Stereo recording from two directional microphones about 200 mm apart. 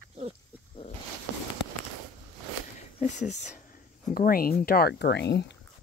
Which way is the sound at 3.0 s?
35° left (ahead or behind).